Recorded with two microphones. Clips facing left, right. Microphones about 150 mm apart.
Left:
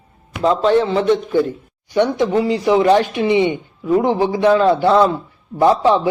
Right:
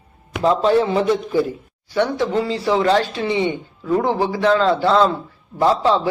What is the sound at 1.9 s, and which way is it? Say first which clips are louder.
Speech: left 3 dB; 15° left (ahead or behind).